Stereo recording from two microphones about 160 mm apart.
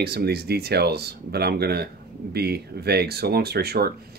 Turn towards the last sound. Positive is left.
turn(degrees=-80)